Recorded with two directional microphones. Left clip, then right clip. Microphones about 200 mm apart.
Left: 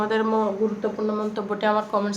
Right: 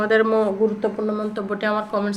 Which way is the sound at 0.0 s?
15° right (ahead or behind).